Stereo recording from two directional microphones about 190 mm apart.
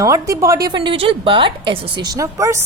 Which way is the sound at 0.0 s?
15° right (ahead or behind).